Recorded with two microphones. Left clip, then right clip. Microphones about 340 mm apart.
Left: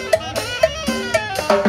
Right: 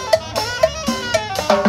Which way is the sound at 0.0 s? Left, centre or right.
Centre.